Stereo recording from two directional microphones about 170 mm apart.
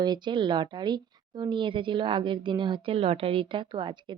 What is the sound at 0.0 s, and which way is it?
A woman's voice, 25° right (ahead or behind).